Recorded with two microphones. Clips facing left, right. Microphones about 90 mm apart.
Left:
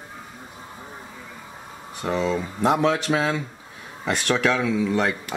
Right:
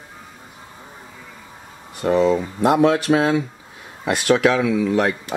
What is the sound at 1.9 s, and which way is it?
Speech, 10° right (ahead or behind).